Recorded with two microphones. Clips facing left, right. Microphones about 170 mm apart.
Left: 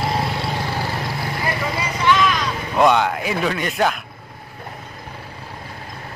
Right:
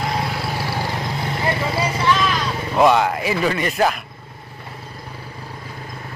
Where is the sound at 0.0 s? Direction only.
Centre (ahead or behind); by 2.3 s 30° right (ahead or behind).